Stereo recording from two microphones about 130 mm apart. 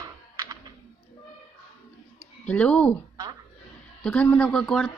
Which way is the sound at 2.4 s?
10° left (ahead or behind).